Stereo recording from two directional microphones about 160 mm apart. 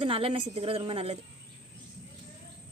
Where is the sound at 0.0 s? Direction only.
35° right (ahead or behind).